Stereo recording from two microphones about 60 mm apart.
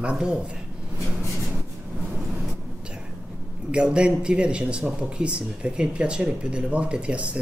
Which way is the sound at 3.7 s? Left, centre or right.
Centre.